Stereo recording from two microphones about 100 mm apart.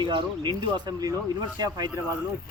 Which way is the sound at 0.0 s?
50° right (ahead or behind).